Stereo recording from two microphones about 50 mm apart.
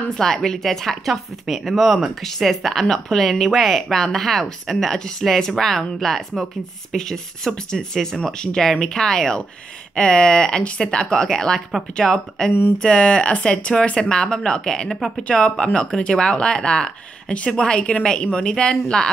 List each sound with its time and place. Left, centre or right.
0.2 s speech: centre